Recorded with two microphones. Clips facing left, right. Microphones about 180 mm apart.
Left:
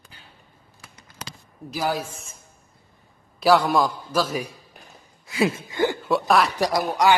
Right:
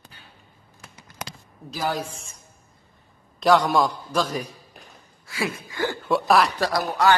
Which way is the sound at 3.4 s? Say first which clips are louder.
Even; centre (ahead or behind).